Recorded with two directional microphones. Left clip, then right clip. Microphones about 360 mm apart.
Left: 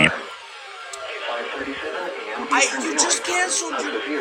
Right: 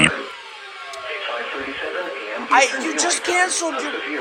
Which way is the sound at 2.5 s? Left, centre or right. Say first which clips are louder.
Right 4 dB; centre.